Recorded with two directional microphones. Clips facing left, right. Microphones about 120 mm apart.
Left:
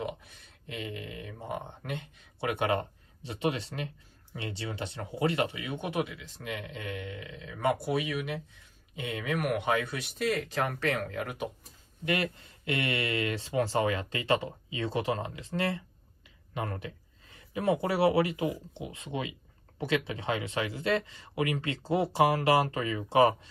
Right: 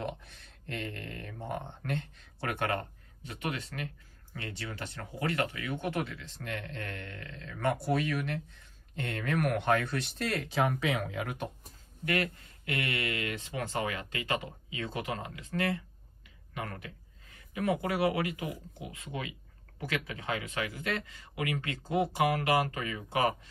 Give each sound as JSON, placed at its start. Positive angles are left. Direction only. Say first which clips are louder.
{"t": 0.0, "sound": "speech", "louder": "left 1 dB", "side_deg": 5}
{"t": 12.0, "sound": "speech", "louder": "left 1 dB", "side_deg": 25}